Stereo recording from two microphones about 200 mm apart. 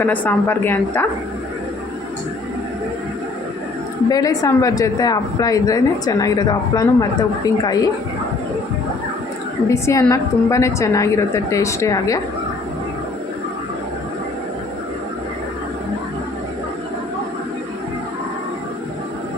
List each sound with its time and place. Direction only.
0.0 s a woman's voice: 10° left (ahead or behind)
4.1 s a woman's voice: 15° left (ahead or behind)
9.6 s a woman's voice: 15° left (ahead or behind)